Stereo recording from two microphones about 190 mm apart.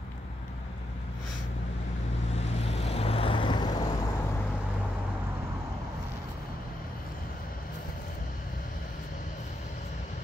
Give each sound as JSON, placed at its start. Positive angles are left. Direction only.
{"t": 2.6, "sound": "vehicle", "side_deg": 35}